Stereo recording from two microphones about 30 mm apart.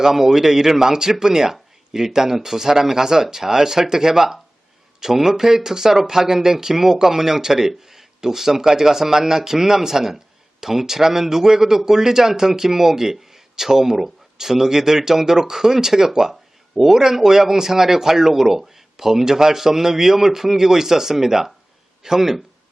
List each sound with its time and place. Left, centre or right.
0.0 s speech: centre